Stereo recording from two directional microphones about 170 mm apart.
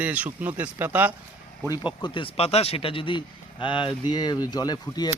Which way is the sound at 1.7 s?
25° left (ahead or behind).